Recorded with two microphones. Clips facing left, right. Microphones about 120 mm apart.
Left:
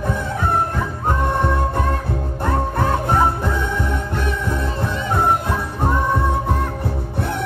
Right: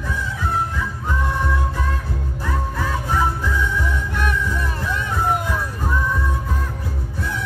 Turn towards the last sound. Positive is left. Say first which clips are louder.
# left 4 dB
turn(degrees=60)  # may be behind; listen again after turning